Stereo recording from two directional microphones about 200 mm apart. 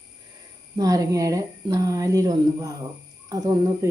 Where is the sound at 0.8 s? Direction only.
15° right (ahead or behind).